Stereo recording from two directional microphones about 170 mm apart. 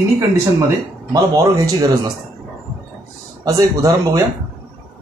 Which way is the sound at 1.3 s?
20° right (ahead or behind).